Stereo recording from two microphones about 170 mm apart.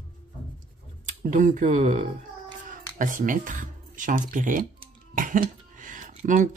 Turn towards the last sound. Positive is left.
turn(degrees=-45)  # may be behind; listen again after turning